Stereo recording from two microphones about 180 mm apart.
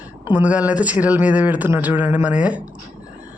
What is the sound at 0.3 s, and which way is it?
A woman's voice, 10° right (ahead or behind).